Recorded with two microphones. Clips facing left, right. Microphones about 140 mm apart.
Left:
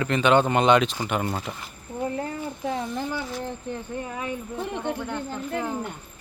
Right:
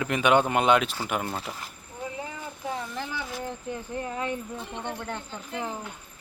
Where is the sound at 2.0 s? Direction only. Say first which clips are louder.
Left 7 dB; 55° left (ahead or behind).